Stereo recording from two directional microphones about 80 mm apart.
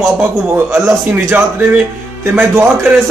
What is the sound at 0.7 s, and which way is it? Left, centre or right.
Speech, right.